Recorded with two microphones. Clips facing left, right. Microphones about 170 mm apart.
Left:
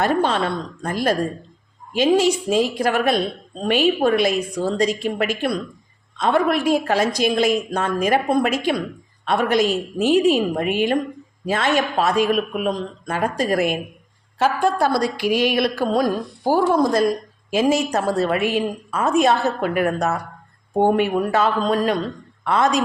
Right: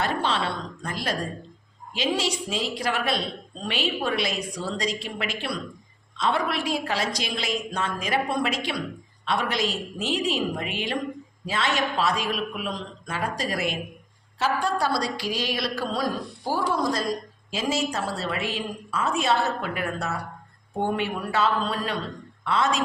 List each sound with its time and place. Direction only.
0.0 s a woman's voice: 50° left (ahead or behind)